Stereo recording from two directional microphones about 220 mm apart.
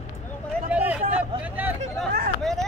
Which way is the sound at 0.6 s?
5° right (ahead or behind).